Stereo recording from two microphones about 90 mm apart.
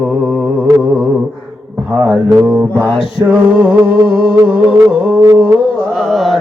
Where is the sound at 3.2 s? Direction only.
20° right (ahead or behind).